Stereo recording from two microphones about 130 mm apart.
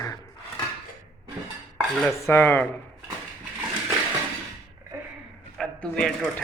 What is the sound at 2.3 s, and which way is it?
Speech, 15° left (ahead or behind).